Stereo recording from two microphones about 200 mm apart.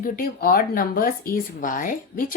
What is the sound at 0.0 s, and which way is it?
Speech, 45° left (ahead or behind).